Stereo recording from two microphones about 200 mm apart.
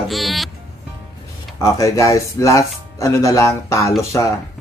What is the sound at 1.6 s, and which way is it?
Speech, 15° left (ahead or behind).